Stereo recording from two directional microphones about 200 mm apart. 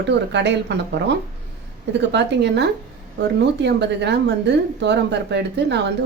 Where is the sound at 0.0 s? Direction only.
60° right (ahead or behind).